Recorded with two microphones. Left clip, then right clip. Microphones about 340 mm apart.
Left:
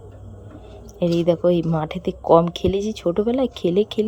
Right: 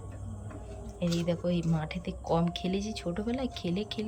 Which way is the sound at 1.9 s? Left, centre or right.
Centre.